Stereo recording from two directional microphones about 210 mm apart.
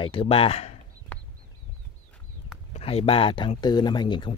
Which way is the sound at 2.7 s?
30° left (ahead or behind).